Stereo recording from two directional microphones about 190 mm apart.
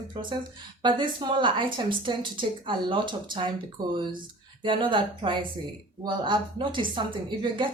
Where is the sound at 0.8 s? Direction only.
25° right (ahead or behind).